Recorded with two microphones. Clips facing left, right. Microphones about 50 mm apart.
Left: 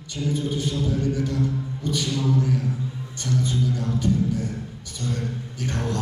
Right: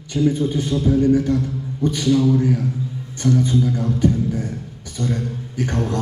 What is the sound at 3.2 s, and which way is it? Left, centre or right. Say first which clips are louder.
Music: right 7 dB; right.